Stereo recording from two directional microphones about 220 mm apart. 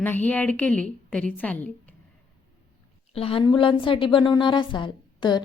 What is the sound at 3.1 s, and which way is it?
A woman's voice, 25° left (ahead or behind).